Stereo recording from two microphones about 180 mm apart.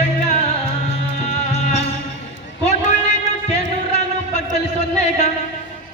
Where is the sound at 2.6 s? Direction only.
40° left (ahead or behind).